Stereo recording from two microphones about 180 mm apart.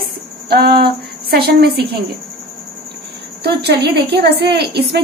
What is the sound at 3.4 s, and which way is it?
Speech, 65° right (ahead or behind).